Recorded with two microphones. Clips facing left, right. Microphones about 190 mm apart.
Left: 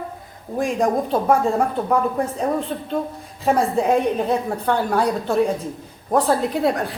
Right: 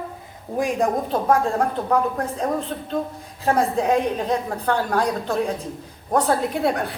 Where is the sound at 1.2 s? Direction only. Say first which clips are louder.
Even; 5° left (ahead or behind).